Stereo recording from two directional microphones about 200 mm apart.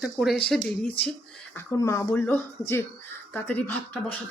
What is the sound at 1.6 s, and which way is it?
Speech, 15° left (ahead or behind).